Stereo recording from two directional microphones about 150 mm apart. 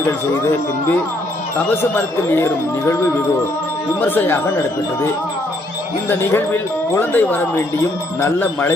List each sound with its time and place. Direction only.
1.7 s speech: 15° left (ahead or behind)
4.1 s speech: 15° left (ahead or behind)
6.1 s speech: 15° left (ahead or behind)